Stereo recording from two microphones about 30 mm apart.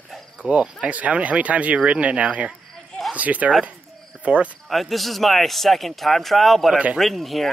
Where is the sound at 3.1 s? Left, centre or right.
Right.